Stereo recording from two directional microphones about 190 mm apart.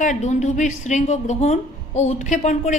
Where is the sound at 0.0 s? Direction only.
40° left (ahead or behind).